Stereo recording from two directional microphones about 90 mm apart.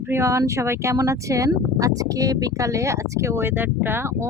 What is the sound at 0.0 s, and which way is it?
Speech, 30° right (ahead or behind).